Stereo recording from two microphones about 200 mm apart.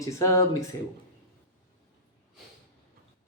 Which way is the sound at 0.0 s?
15° left (ahead or behind).